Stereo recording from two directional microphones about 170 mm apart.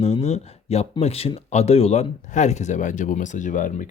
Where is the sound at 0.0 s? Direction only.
40° left (ahead or behind).